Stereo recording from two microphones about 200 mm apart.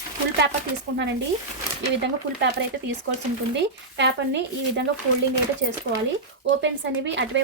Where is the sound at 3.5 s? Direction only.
60° right (ahead or behind).